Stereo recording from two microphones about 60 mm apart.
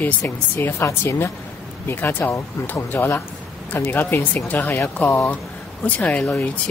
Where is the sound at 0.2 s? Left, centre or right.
Left.